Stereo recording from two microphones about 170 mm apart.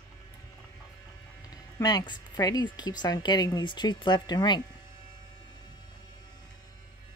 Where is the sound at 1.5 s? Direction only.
25° left (ahead or behind).